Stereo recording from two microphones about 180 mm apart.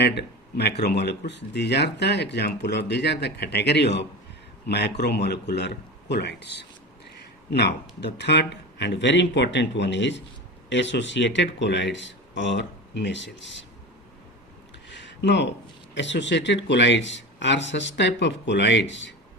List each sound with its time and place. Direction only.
0.0 s speech: 65° left (ahead or behind); by 13.7 s 85° left
14.8 s a sound: 80° left
16.0 s speech: 80° left